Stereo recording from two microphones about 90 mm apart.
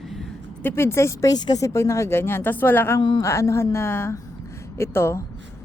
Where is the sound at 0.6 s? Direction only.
30° left (ahead or behind).